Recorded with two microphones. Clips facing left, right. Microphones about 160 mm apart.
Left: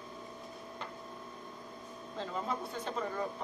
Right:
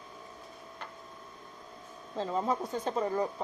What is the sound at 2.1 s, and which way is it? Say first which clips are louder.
Speech: right 6 dB; 40° right (ahead or behind).